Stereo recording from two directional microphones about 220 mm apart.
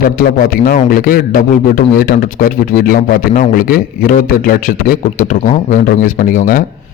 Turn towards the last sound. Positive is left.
turn(degrees=35)  # may be behind; listen again after turning